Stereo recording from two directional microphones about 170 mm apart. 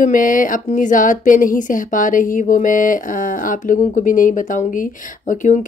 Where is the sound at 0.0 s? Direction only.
50° left (ahead or behind).